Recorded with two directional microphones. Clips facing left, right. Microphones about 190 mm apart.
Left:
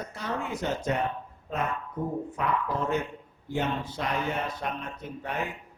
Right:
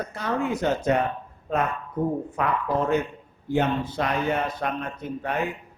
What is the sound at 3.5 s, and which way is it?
Speech, 65° right (ahead or behind).